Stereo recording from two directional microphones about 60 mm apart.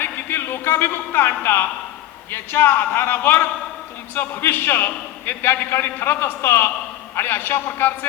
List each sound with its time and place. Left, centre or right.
0.0 s a man's voice: left